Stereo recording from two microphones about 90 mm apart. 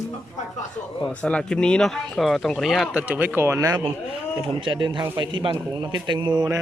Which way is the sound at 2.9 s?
15° right (ahead or behind).